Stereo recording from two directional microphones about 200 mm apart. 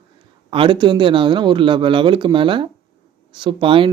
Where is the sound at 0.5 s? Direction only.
25° right (ahead or behind).